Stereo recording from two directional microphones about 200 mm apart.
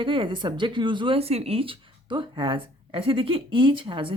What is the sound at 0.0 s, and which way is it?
A woman's voice, 25° right (ahead or behind).